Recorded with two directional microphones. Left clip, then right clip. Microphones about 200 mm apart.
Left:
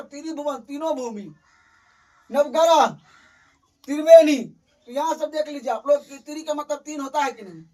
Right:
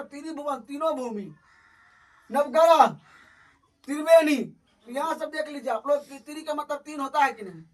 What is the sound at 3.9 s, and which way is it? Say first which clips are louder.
Speech: left 7 dB; 10° right (ahead or behind).